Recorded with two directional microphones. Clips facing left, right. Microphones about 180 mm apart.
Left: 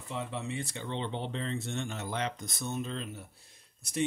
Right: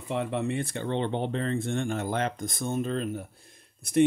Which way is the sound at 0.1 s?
60° right (ahead or behind).